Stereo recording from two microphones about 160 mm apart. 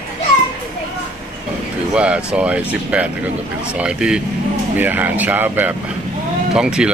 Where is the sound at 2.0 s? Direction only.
5° right (ahead or behind).